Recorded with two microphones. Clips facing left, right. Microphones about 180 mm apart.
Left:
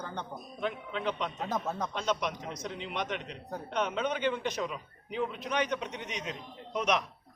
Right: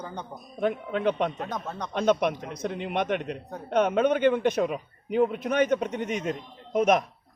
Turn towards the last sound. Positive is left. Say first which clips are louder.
# right 8 dB
turn(degrees=-50)  # may be behind; listen again after turning